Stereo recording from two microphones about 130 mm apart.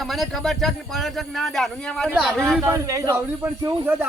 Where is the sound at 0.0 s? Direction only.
Centre (ahead or behind).